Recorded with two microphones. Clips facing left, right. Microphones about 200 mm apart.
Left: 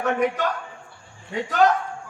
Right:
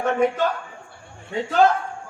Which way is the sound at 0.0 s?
30° right (ahead or behind).